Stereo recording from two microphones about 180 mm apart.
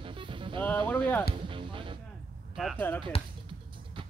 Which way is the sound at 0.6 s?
10° left (ahead or behind).